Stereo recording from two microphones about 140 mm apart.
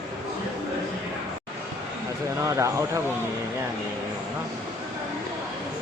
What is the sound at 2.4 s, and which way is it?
Speech, 20° right (ahead or behind).